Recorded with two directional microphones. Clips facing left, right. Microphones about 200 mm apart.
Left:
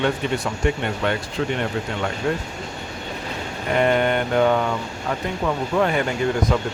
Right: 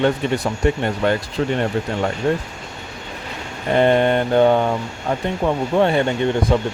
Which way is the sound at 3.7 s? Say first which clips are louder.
Right 4 dB; 30° right (ahead or behind).